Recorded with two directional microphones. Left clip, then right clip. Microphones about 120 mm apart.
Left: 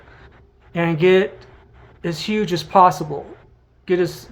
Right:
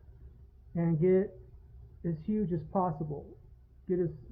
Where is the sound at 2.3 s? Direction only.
35° left (ahead or behind).